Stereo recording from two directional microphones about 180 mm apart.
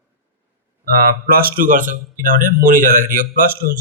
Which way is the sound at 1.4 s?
50° right (ahead or behind).